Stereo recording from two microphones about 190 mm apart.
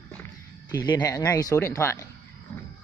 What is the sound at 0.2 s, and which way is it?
Speech, 20° left (ahead or behind).